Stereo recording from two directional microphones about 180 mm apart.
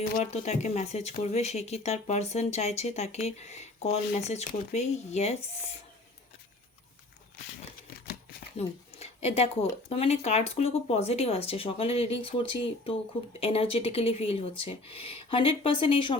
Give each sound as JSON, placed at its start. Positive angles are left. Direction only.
{"t": 0.0, "sound": "speech", "side_deg": 40}
{"t": 8.5, "sound": "a sound", "side_deg": 35}
{"t": 9.9, "sound": "speech", "side_deg": 35}